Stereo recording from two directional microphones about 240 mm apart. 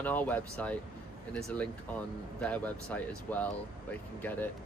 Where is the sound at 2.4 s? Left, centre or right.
Centre.